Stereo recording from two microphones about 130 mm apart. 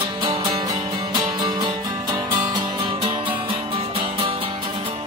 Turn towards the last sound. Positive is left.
turn(degrees=-45)  # may be behind; listen again after turning